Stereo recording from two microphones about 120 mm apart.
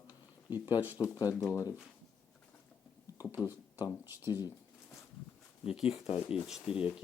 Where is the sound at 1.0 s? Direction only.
30° left (ahead or behind).